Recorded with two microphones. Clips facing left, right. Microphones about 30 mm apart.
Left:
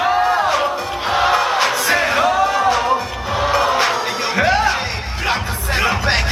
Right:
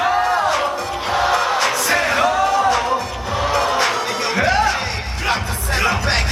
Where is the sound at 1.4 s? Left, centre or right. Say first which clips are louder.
Left 1 dB; centre.